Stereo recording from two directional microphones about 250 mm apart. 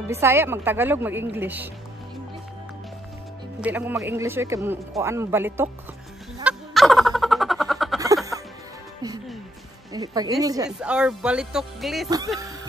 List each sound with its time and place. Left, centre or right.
0.1 s speech: centre
3.6 s speech: centre
6.4 s music: centre
9.0 s music: centre
9.9 s speech: centre
10.8 s speech: centre